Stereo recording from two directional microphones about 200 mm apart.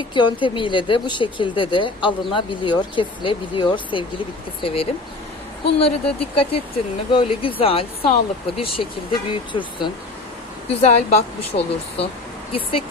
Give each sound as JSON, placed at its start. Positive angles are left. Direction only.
{"t": 0.1, "sound": "a woman's voice", "side_deg": 25}